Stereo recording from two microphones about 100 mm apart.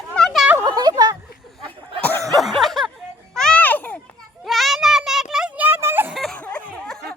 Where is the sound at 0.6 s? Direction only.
45° right (ahead or behind).